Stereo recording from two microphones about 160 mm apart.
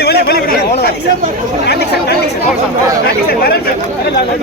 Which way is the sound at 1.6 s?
90° left.